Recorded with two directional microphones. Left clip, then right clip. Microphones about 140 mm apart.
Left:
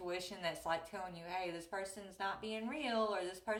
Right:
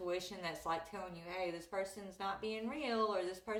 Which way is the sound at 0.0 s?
20° left (ahead or behind).